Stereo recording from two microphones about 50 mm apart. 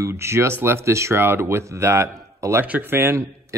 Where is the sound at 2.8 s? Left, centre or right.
Right.